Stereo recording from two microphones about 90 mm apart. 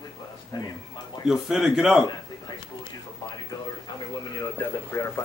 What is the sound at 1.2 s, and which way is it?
Speech, 5° right (ahead or behind).